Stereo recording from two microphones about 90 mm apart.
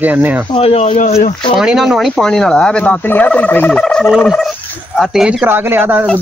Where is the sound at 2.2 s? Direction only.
5° left (ahead or behind).